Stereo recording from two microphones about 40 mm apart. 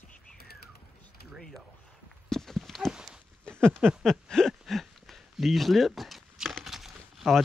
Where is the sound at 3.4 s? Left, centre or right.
Left; by 7.2 s centre.